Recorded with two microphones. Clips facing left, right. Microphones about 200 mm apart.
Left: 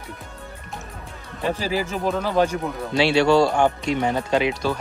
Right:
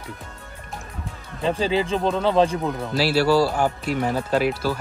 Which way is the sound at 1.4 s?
25° right (ahead or behind).